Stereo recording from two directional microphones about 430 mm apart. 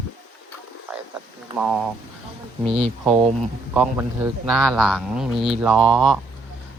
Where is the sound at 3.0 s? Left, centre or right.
Centre.